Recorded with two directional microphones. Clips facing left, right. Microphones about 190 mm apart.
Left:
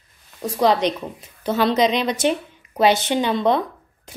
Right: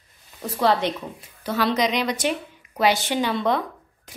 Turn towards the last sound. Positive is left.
turn(degrees=25)  # may be behind; listen again after turning